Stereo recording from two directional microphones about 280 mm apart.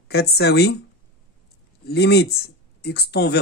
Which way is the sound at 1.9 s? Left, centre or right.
Left.